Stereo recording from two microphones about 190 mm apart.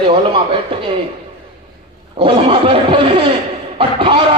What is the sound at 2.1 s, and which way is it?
A man's voice, 30° right (ahead or behind).